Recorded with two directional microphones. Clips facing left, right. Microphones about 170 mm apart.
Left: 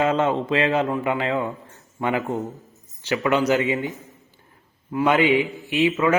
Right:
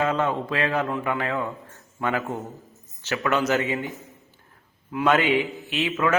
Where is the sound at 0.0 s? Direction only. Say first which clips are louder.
Left 3 dB; 25° left (ahead or behind).